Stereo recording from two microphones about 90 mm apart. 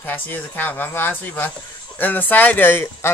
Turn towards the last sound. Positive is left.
turn(degrees=25)  # may be behind; listen again after turning